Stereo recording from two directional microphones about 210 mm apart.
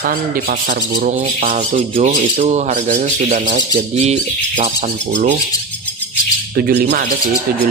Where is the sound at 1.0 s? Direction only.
40° right (ahead or behind).